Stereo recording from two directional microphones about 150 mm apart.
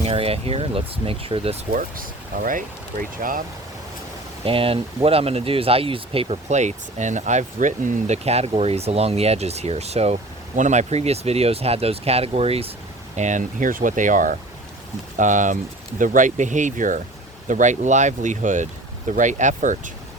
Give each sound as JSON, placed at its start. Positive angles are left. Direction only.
{"t": 0.0, "sound": "speech", "side_deg": -40}
{"t": 1.7, "sound": "speech", "side_deg": -65}
{"t": 4.4, "sound": "speech", "side_deg": -40}
{"t": 13.1, "sound": "speech", "side_deg": -55}